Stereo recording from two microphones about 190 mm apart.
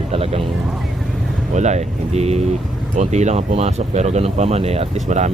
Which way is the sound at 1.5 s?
35° right (ahead or behind).